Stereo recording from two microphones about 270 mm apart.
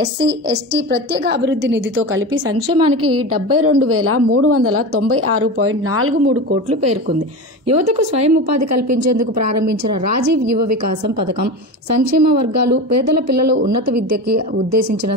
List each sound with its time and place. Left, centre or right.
0.0 s a woman's voice: right
2.5 s a woman's voice: right
13.7 s a woman's voice: right